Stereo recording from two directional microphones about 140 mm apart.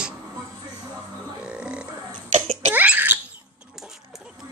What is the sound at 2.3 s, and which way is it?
Cough, 60° right (ahead or behind).